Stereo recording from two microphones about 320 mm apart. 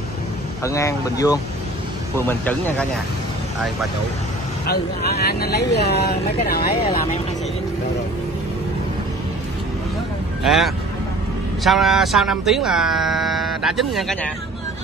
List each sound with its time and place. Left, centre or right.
0.7 s speech: centre
4.6 s speech: left
10.4 s speech: centre